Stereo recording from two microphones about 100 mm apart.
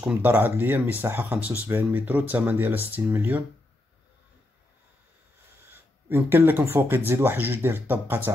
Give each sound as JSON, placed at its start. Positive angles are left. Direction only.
{"t": 0.0, "sound": "speech", "side_deg": -15}
{"t": 5.7, "sound": "a sound", "side_deg": -20}
{"t": 6.6, "sound": "speech", "side_deg": -20}